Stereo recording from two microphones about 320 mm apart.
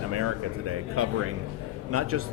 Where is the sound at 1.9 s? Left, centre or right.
Right.